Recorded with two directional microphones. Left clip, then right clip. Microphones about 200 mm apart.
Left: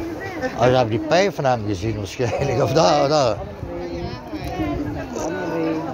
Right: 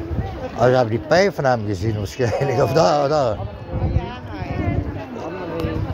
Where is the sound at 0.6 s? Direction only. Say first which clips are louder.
Right 1 dB; 25° right (ahead or behind).